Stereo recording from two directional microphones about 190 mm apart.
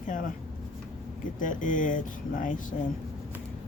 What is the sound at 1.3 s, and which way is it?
Speech, 45° left (ahead or behind).